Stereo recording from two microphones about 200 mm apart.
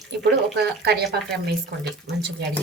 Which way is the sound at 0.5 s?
55° right (ahead or behind).